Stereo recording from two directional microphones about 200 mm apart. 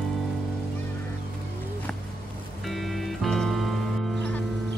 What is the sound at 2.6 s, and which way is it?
Music, centre (ahead or behind).